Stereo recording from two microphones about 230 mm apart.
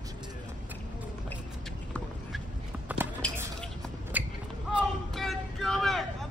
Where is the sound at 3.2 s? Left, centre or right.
Centre.